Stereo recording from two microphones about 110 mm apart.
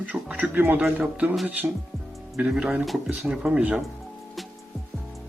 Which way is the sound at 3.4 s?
15° right (ahead or behind).